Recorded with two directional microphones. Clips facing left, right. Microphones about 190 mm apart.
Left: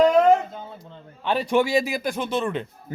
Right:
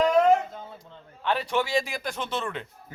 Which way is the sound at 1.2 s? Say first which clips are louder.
Left 5 dB; 15° left (ahead or behind).